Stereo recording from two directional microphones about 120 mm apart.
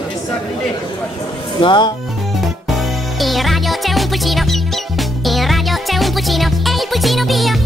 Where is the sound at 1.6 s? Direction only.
40° left (ahead or behind).